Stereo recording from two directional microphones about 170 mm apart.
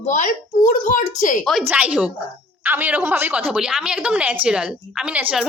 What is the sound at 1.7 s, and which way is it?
A woman's voice, 10° right (ahead or behind).